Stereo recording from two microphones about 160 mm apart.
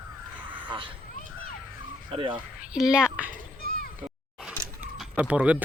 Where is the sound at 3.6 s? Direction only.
70° left (ahead or behind).